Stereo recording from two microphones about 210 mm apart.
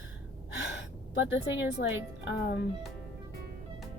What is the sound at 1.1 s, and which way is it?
A woman's voice, 60° left (ahead or behind).